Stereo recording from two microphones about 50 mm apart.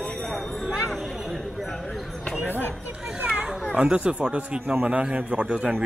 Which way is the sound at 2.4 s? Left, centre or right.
Left.